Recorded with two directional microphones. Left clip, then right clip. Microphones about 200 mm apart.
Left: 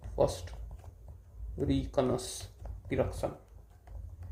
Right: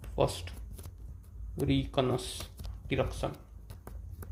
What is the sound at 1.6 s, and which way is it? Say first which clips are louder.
Speech: even; 45° right (ahead or behind).